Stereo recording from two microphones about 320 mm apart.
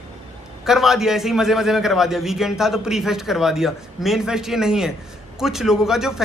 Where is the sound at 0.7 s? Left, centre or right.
Centre.